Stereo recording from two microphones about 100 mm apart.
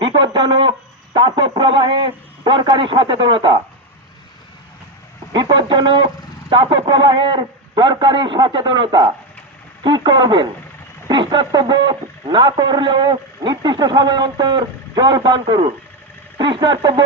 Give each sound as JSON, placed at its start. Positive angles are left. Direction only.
{"t": 0.0, "sound": "speech", "side_deg": -50}
{"t": 5.3, "sound": "speech", "side_deg": -45}